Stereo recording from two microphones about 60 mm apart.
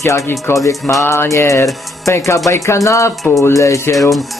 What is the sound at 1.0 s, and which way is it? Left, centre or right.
Music, left.